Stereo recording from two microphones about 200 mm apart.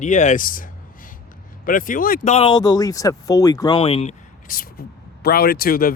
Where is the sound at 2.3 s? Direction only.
25° left (ahead or behind).